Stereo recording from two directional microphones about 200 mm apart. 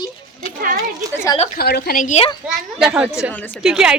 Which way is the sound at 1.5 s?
50° left (ahead or behind).